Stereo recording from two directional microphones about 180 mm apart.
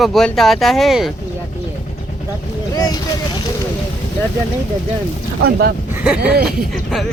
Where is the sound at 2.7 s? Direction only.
20° left (ahead or behind).